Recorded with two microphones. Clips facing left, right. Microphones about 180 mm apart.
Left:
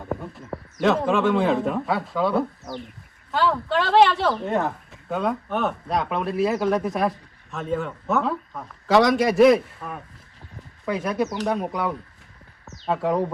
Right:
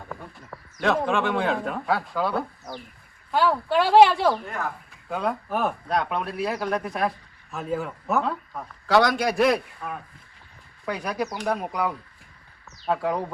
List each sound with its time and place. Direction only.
0.8 s speech: centre (ahead or behind)
3.3 s speech: 10° right (ahead or behind)
4.4 s speech: 25° left (ahead or behind)
5.0 s speech: centre (ahead or behind)